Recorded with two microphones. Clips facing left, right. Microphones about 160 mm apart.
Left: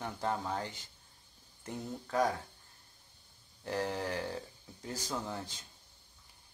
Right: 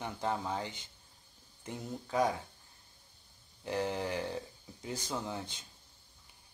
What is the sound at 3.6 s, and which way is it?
Speech, centre (ahead or behind).